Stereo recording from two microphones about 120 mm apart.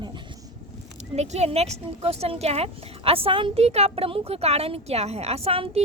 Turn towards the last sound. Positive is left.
turn(degrees=-55)  # may be behind; listen again after turning